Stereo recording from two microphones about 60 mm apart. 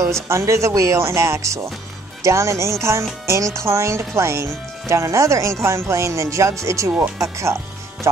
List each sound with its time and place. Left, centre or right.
0.0 s speech: right